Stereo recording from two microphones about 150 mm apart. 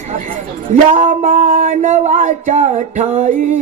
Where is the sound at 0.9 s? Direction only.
65° right (ahead or behind).